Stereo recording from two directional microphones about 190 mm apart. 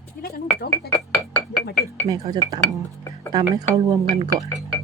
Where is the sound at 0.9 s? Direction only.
15° left (ahead or behind).